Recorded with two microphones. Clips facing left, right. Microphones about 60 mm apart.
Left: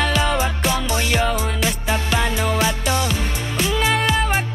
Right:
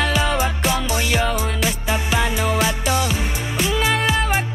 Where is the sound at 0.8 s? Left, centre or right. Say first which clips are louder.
Even; centre.